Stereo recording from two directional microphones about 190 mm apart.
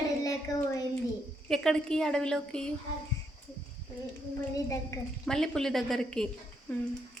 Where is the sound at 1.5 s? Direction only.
5° left (ahead or behind).